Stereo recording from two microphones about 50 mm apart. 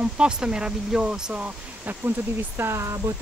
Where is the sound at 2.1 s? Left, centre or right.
Right.